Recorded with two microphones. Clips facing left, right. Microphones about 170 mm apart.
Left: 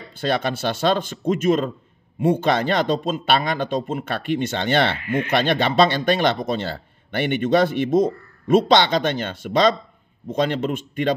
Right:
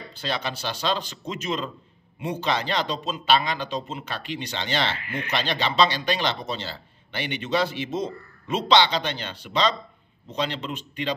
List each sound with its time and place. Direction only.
0.1 s speech: 50° left (ahead or behind)